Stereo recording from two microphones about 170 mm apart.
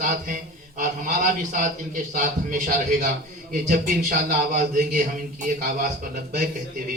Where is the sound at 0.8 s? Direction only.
50° right (ahead or behind).